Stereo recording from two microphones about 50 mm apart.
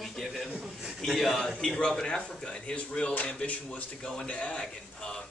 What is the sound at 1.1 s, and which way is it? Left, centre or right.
Speech, centre.